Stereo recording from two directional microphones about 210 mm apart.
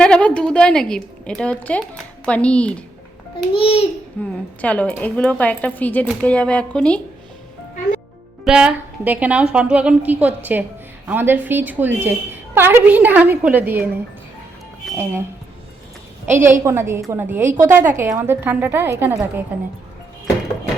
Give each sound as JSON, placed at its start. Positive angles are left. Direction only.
{"t": 0.0, "sound": "a woman's voice", "side_deg": 5}
{"t": 3.5, "sound": "a child's voice", "side_deg": 25}
{"t": 4.2, "sound": "a woman's voice", "side_deg": 5}
{"t": 8.4, "sound": "a woman's voice", "side_deg": -5}
{"t": 16.2, "sound": "a woman's voice", "side_deg": -10}